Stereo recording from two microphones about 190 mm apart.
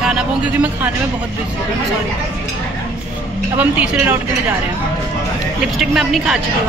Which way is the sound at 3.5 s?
10° right (ahead or behind).